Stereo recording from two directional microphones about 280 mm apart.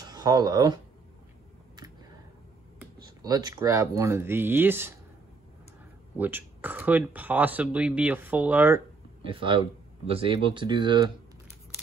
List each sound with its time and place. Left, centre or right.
0.0 s speech: centre
2.8 s speech: centre
6.1 s speech: centre
9.2 s speech: centre